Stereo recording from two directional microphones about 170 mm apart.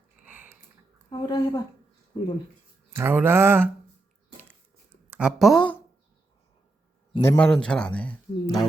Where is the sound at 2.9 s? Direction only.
15° right (ahead or behind).